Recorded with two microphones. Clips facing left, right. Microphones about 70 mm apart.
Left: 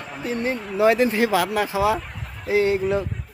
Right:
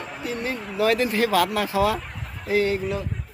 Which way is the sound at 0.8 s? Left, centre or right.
Left.